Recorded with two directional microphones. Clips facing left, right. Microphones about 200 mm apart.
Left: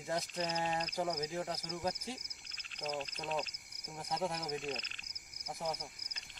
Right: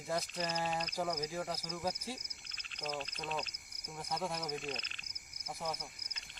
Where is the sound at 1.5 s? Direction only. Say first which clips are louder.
Left 1 dB; 20° left (ahead or behind).